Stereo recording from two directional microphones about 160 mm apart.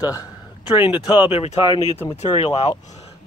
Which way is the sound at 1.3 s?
40° left (ahead or behind).